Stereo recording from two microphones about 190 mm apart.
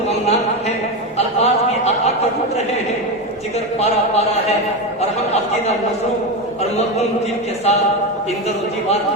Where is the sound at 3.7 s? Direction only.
35° left (ahead or behind).